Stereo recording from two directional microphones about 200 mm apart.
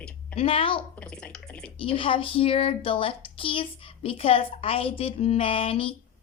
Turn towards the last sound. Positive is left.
turn(degrees=30)  # may be behind; listen again after turning